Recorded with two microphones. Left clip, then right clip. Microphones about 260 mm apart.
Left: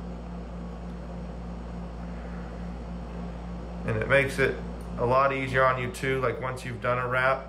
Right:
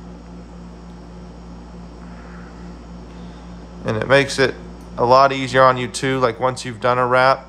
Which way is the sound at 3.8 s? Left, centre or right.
Centre.